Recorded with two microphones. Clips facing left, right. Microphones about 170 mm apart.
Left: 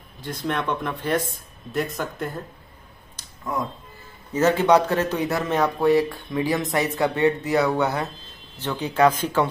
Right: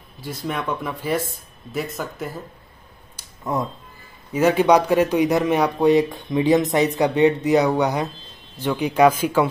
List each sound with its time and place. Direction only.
0.2 s speech: 5° right (ahead or behind)
3.2 s a sound: 10° right (ahead or behind)
4.3 s speech: 10° right (ahead or behind)